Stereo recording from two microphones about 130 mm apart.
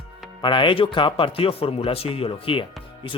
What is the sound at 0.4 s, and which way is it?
Speech, 40° left (ahead or behind).